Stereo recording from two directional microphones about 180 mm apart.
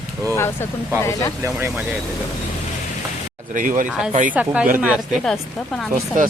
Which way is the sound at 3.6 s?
45° right (ahead or behind).